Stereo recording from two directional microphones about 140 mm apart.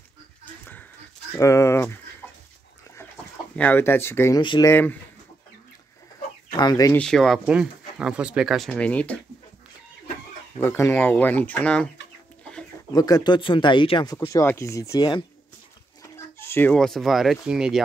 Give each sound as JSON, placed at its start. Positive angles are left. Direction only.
{"t": 1.3, "sound": "speech", "side_deg": 20}
{"t": 3.5, "sound": "speech", "side_deg": 10}
{"t": 4.4, "sound": "speech", "side_deg": 35}
{"t": 4.6, "sound": "speech", "side_deg": 15}
{"t": 6.5, "sound": "speech", "side_deg": 30}
{"t": 6.9, "sound": "speech", "side_deg": 5}
{"t": 7.4, "sound": "speech", "side_deg": -5}
{"t": 10.6, "sound": "speech", "side_deg": 15}
{"t": 12.9, "sound": "speech", "side_deg": 30}
{"t": 14.3, "sound": "speech", "side_deg": 20}
{"t": 16.0, "sound": "a sound", "side_deg": 15}
{"t": 16.7, "sound": "speech", "side_deg": 5}